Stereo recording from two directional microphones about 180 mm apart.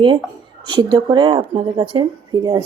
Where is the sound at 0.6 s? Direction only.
25° right (ahead or behind).